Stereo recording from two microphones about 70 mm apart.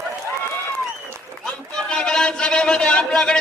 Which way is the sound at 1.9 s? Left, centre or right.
Centre.